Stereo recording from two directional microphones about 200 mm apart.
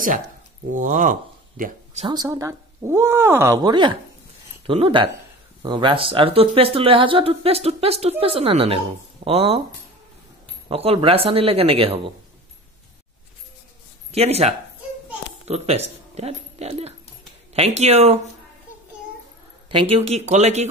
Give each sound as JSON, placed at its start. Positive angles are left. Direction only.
{"t": 0.7, "sound": "speech", "side_deg": -40}
{"t": 2.0, "sound": "speech", "side_deg": -20}
{"t": 10.7, "sound": "speech", "side_deg": -30}
{"t": 14.1, "sound": "speech", "side_deg": -30}
{"t": 19.7, "sound": "speech", "side_deg": -25}